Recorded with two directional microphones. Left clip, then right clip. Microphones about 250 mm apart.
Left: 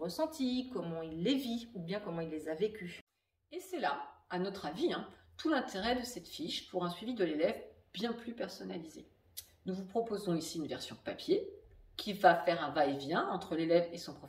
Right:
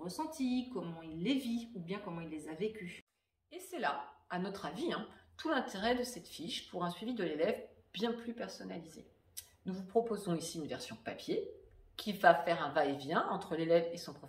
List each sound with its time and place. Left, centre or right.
0.0 s a woman's voice: centre
3.5 s speech: centre